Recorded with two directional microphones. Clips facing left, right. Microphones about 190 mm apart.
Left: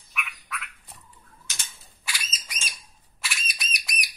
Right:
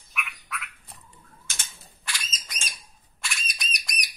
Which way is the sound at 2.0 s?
10° left (ahead or behind).